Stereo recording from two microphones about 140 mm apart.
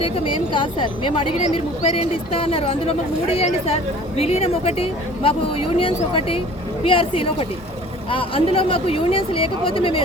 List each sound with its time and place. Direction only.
0.0 s speech: 40° left (ahead or behind)